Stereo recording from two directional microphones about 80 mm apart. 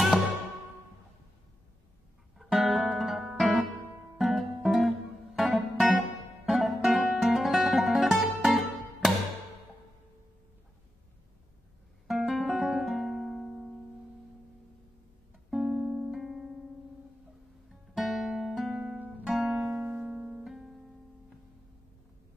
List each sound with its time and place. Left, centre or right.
2.3 s music: centre
12.1 s music: centre
15.5 s music: centre
17.6 s music: centre
19.6 s music: right